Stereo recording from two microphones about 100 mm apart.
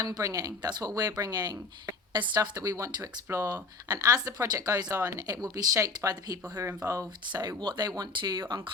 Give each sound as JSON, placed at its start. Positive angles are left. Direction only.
{"t": 0.0, "sound": "speech", "side_deg": -35}
{"t": 6.7, "sound": "speech", "side_deg": -25}
{"t": 7.3, "sound": "speech", "side_deg": -50}